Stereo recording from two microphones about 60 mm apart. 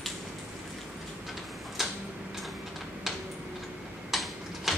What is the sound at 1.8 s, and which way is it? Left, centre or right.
Tick-tock, centre.